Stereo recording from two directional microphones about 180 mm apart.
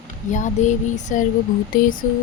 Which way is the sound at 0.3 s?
45° left (ahead or behind).